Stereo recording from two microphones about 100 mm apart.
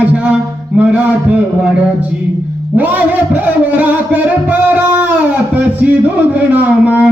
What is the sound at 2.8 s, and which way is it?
Music, 15° right (ahead or behind).